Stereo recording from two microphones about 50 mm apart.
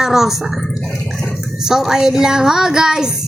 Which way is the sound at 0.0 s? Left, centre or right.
Centre.